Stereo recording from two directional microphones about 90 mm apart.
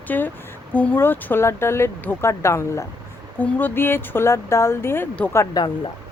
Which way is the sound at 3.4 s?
20° left (ahead or behind).